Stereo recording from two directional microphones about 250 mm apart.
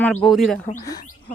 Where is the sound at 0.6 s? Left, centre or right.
Left.